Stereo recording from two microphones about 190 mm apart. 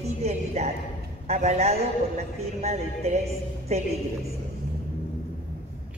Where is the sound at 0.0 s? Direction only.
35° right (ahead or behind).